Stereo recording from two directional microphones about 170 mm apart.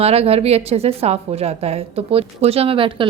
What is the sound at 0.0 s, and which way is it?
A woman's voice, 35° right (ahead or behind).